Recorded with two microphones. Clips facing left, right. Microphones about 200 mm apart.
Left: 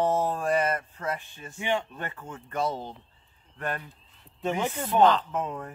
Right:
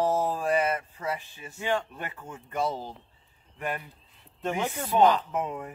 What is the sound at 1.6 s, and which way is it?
Speech, 20° left (ahead or behind).